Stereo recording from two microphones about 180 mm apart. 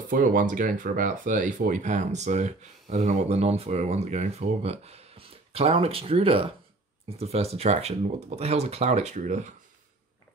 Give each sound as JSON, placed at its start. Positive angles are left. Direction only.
{"t": 0.1, "sound": "speech", "side_deg": -50}